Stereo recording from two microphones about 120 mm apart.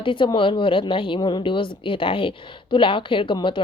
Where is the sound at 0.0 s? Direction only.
45° left (ahead or behind).